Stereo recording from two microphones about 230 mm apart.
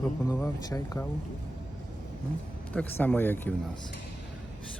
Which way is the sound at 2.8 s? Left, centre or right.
Centre.